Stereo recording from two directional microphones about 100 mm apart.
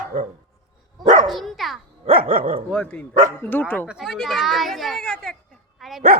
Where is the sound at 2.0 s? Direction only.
70° right (ahead or behind).